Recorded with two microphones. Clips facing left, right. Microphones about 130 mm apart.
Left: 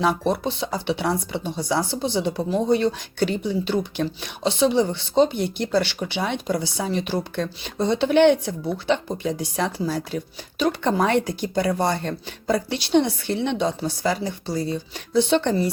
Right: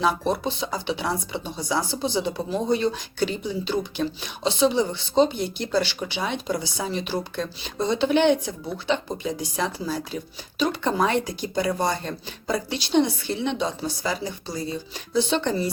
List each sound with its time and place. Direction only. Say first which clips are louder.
0.0 s speech: left 2 dB; 60° left (ahead or behind)